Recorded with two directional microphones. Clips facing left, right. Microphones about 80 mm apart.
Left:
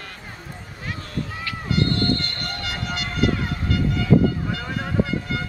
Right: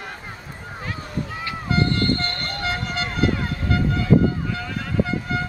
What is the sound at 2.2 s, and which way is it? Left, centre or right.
Vehicle, right.